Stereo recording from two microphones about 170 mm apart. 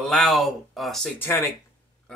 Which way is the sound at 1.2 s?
15° left (ahead or behind).